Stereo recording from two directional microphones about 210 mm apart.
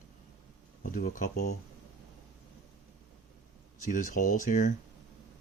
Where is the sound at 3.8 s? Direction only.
40° left (ahead or behind).